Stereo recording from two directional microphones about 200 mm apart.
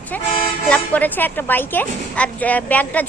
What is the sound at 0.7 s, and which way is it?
A woman's voice, 10° left (ahead or behind).